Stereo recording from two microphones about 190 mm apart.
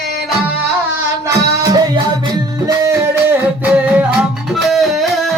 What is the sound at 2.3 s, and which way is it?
Music, 20° right (ahead or behind).